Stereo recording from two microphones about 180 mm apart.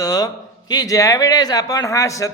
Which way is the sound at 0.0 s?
20° left (ahead or behind).